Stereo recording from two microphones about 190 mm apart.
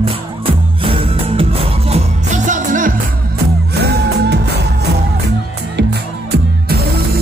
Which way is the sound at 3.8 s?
60° right (ahead or behind).